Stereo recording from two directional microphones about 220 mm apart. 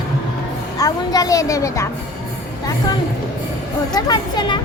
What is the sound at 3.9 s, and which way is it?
Speech, 20° left (ahead or behind).